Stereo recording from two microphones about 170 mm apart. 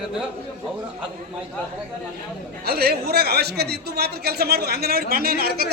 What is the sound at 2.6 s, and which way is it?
Speech, 65° right (ahead or behind).